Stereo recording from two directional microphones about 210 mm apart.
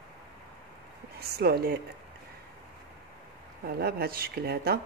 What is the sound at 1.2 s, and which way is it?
Speech, 50° right (ahead or behind).